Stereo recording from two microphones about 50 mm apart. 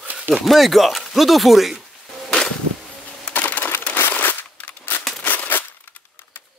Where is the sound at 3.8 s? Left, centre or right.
Left.